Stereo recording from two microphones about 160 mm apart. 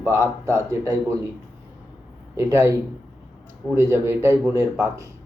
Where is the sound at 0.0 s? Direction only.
15° right (ahead or behind).